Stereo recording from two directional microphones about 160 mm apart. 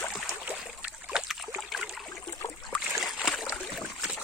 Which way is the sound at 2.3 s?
20° left (ahead or behind).